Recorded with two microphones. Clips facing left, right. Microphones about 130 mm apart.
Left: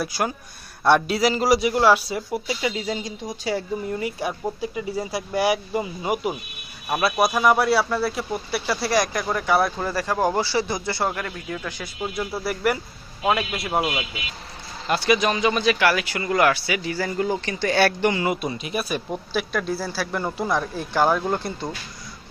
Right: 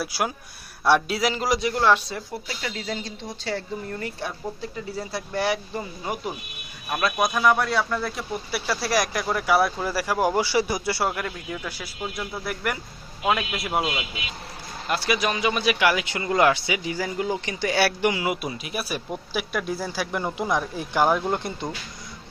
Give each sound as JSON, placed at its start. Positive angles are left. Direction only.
{"t": 0.0, "sound": "speech", "side_deg": -5}
{"t": 11.9, "sound": "speech", "side_deg": 5}